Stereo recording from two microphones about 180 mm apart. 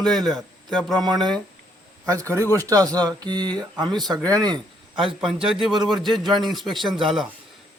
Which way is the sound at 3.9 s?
Centre (ahead or behind).